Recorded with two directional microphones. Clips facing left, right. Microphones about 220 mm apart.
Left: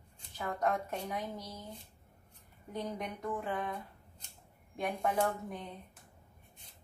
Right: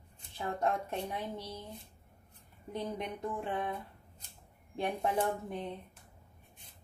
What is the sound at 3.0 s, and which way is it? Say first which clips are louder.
A woman's voice: right 1 dB; 30° right (ahead or behind).